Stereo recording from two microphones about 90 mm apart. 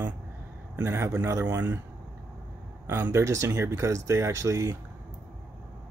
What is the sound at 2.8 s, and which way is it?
Speech, 30° right (ahead or behind).